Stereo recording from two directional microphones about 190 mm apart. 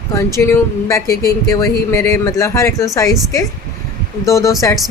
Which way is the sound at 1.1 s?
50° left (ahead or behind).